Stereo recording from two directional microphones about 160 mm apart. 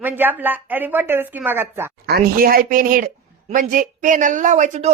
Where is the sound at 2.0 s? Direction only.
75° right (ahead or behind).